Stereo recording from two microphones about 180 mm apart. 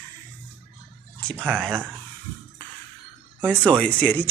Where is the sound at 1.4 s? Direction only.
10° right (ahead or behind).